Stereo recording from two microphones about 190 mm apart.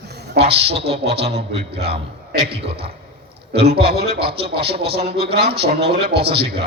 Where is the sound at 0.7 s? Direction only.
30° right (ahead or behind).